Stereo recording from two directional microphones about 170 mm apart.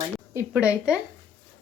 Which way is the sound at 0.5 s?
5° right (ahead or behind).